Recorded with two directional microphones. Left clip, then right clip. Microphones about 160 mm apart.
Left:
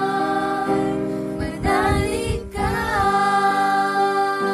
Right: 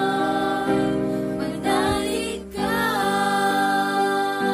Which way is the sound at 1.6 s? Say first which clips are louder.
Left 3 dB; centre (ahead or behind).